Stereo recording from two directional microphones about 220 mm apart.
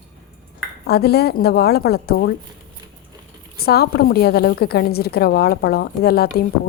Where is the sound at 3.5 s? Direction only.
45° left (ahead or behind).